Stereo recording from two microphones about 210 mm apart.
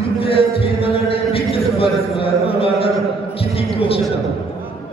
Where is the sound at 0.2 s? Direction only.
25° left (ahead or behind).